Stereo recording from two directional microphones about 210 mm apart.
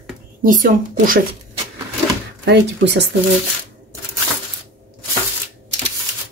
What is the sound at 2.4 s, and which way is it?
Speech, 55° right (ahead or behind).